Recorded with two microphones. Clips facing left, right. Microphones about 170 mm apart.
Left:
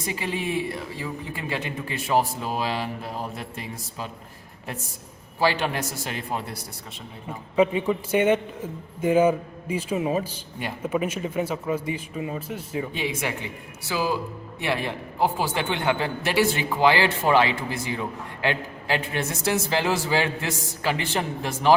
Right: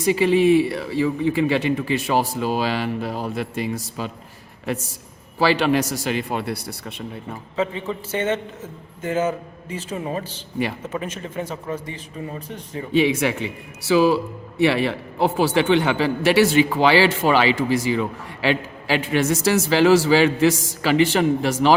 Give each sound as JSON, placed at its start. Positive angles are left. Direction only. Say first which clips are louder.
{"t": 0.0, "sound": "speech", "louder": "right 13 dB", "side_deg": -75}
{"t": 5.4, "sound": "a man's voice", "louder": "right 6 dB", "side_deg": -90}
{"t": 7.5, "sound": "a man's voice", "louder": "left 4 dB", "side_deg": 15}
{"t": 12.9, "sound": "speech", "louder": "right 10 dB", "side_deg": -75}
{"t": 14.6, "sound": "a man's voice", "louder": "right 9 dB", "side_deg": -90}